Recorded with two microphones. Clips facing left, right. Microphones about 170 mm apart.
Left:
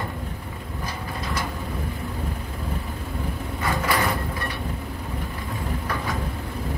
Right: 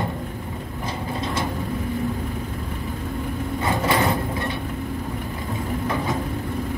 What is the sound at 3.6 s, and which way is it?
Sliding door, 25° right (ahead or behind).